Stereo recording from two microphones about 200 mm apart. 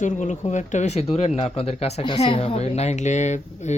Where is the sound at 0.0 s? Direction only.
40° left (ahead or behind).